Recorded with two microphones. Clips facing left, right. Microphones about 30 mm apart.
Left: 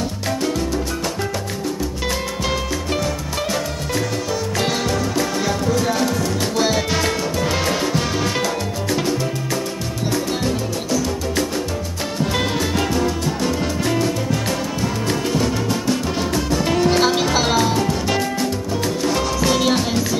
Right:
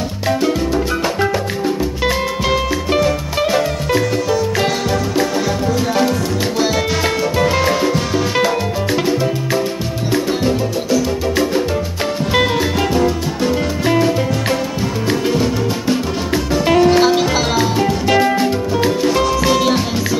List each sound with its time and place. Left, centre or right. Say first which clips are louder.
5.8 s music: right 3 dB; centre
7.4 s music: right 5 dB; centre
10.1 s music: right 6 dB; centre
17.7 s music: right 5 dB; centre